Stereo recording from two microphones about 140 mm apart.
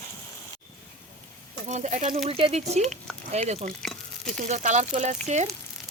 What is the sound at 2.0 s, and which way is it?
Speech, 45° right (ahead or behind).